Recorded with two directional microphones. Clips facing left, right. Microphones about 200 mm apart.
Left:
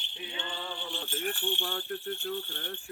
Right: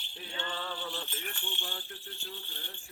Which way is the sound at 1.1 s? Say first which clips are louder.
Left 9 dB; 55° left (ahead or behind).